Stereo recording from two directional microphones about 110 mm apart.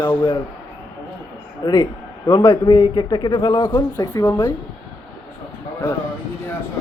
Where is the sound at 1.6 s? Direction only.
40° left (ahead or behind).